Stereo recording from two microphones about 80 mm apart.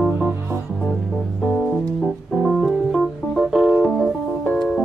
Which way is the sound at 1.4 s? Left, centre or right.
Centre.